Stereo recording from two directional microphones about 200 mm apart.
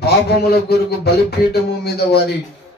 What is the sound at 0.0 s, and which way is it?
Speech, 50° left (ahead or behind).